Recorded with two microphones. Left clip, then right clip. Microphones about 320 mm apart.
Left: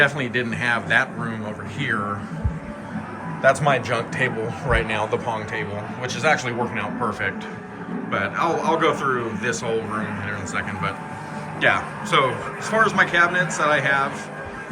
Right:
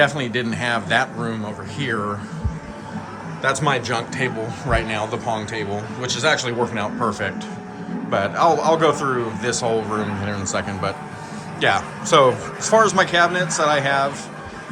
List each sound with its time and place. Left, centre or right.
0.0 s a man's voice: centre
3.4 s a man's voice: centre